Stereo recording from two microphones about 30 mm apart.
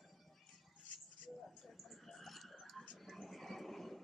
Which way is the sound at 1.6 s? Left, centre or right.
Centre.